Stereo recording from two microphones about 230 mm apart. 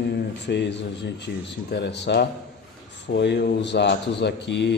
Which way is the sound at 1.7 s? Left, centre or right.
Left.